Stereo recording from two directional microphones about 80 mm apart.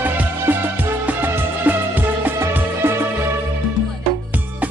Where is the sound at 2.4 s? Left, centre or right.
Right.